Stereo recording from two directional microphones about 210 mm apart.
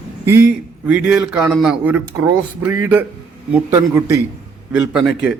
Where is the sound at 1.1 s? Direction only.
5° right (ahead or behind).